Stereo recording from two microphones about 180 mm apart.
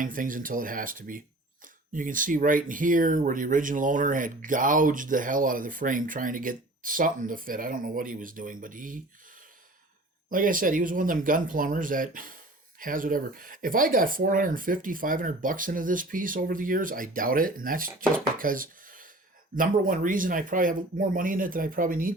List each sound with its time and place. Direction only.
0.0 s speech: 50° right (ahead or behind)
10.2 s speech: 50° right (ahead or behind)
18.3 s wood: 50° right (ahead or behind)
19.5 s speech: 50° right (ahead or behind)